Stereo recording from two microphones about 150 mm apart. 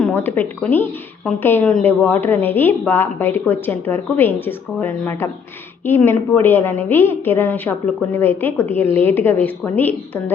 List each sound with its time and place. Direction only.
0.0 s a woman's voice: 15° left (ahead or behind)